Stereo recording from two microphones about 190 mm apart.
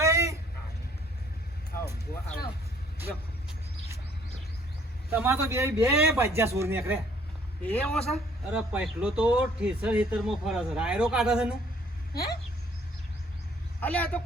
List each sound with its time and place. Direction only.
0.0 s a sound: 15° right (ahead or behind)
5.1 s speech: 10° right (ahead or behind)
7.6 s a man's voice: 5° left (ahead or behind)
8.5 s speech: 5° right (ahead or behind)
12.1 s speech: 55° left (ahead or behind)
13.8 s a man's voice: 10° left (ahead or behind)